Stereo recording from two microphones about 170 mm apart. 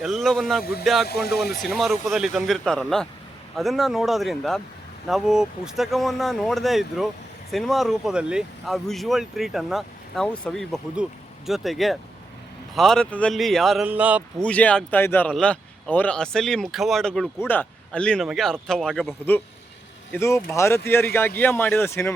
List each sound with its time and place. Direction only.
0.0 s speech: centre (ahead or behind)
0.6 s speech: 65° left (ahead or behind)
1.6 s speech: centre (ahead or behind)
13.8 s speech: 10° right (ahead or behind)
14.4 s speech: 10° left (ahead or behind)